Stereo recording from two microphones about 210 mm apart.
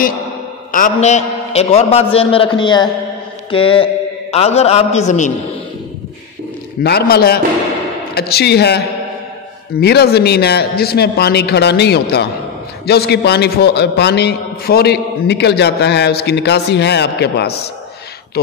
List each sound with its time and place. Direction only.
0.7 s a man's voice: 40° left (ahead or behind)
6.8 s a man's voice: 50° left (ahead or behind)